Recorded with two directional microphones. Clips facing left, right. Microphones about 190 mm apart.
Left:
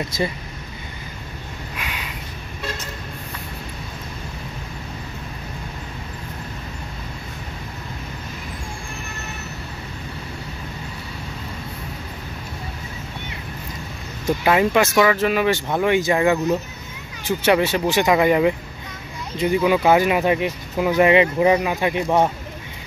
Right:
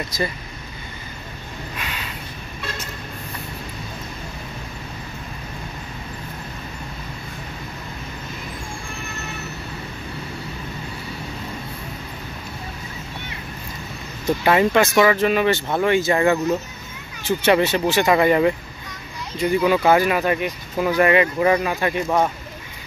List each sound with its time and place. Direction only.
0.1 s speech: 25° left (ahead or behind)
1.8 s a sound: 10° left (ahead or behind)
14.2 s speech: 5° left (ahead or behind)